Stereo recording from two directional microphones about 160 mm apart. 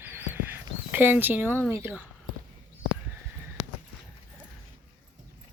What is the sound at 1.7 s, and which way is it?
Speech, 15° right (ahead or behind).